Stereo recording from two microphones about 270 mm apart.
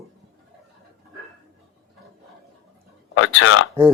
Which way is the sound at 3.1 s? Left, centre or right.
Left.